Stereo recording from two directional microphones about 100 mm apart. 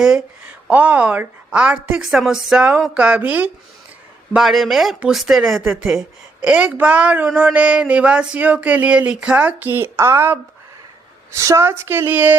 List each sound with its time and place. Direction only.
0.0 s a woman's voice: 10° right (ahead or behind)
4.4 s a woman's voice: centre (ahead or behind); by 10.3 s 25° right (ahead or behind)
11.3 s a woman's voice: 30° right (ahead or behind)